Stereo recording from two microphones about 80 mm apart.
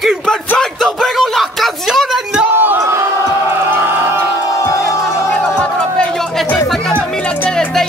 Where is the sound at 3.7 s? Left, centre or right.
Right.